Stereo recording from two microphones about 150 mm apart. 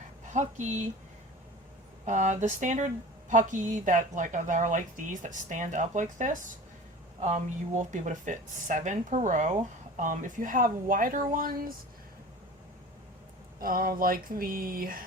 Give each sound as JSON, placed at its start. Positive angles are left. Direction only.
{"t": 0.3, "sound": "speech", "side_deg": -55}
{"t": 2.0, "sound": "speech", "side_deg": -55}
{"t": 13.6, "sound": "speech", "side_deg": -75}